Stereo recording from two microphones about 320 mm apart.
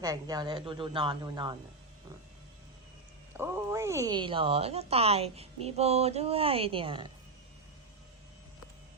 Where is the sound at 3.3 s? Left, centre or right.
Centre.